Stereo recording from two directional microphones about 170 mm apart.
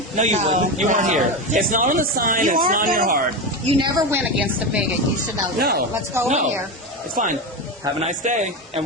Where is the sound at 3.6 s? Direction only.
35° right (ahead or behind).